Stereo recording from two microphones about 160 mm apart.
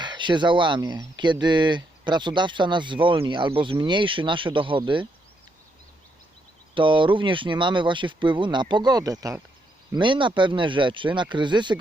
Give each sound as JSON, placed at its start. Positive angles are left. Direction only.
{"t": 0.0, "sound": "speech", "side_deg": -30}
{"t": 6.7, "sound": "speech", "side_deg": -30}